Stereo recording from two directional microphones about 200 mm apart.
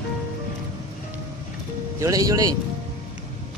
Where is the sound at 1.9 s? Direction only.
15° right (ahead or behind).